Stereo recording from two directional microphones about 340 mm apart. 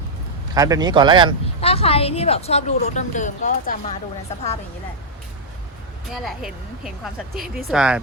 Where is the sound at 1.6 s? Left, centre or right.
Centre.